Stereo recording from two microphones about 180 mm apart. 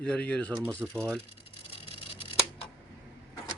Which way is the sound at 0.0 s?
5° left (ahead or behind).